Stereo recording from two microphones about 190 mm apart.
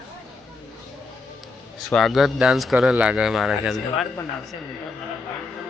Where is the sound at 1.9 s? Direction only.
Centre (ahead or behind).